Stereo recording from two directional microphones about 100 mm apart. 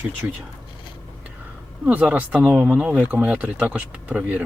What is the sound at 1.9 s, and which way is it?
Speech, 15° right (ahead or behind).